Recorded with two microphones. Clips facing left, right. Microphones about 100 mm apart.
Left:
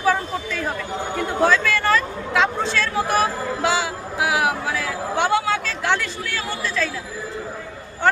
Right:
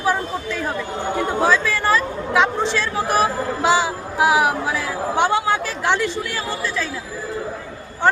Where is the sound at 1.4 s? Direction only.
15° right (ahead or behind).